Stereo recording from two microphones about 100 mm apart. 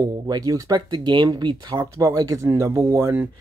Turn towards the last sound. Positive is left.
turn(degrees=-30)  # may be behind; listen again after turning